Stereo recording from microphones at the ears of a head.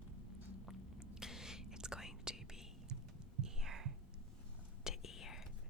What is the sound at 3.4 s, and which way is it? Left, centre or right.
Whispering, right.